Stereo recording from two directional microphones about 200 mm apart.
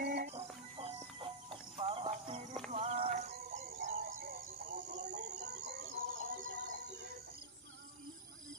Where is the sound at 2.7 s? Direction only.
35° right (ahead or behind).